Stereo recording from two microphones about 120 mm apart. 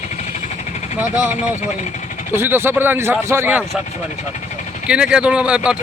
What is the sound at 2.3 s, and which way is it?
A man's voice, 20° right (ahead or behind).